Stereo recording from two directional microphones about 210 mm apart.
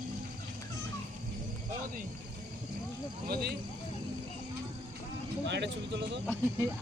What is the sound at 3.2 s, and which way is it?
Speech, 50° right (ahead or behind).